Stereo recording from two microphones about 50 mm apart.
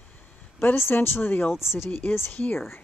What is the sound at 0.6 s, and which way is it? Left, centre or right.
Speech, left.